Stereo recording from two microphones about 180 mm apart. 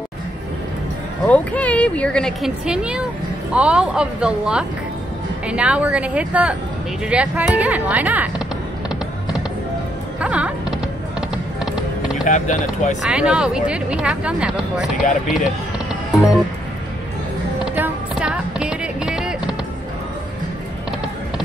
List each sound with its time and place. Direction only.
1.2 s speech: 10° left (ahead or behind); by 8.3 s 10° right (ahead or behind)
10.2 s music: 5° right (ahead or behind)
12.3 s speech: 45° left (ahead or behind)
13.0 s speech: 5° right (ahead or behind)
17.7 s music: 10° right (ahead or behind)